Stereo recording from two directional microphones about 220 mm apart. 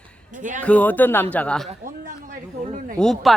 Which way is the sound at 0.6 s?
5° left (ahead or behind).